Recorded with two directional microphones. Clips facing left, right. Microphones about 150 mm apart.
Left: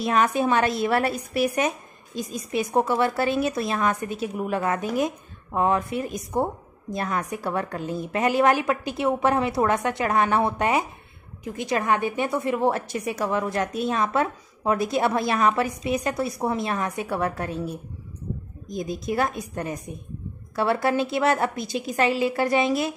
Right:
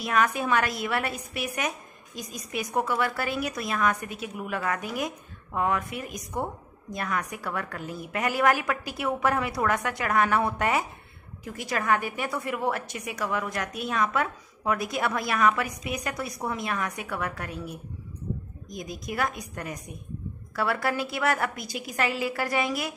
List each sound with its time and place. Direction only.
0.0 s a woman's voice: 25° left (ahead or behind)